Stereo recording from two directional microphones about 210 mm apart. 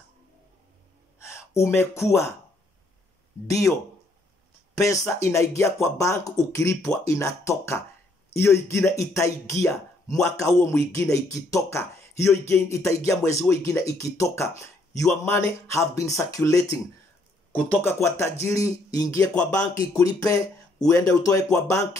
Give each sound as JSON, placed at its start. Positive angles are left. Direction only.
{"t": 1.2, "sound": "speech", "side_deg": 15}
{"t": 3.4, "sound": "speech", "side_deg": 15}
{"t": 4.7, "sound": "speech", "side_deg": 15}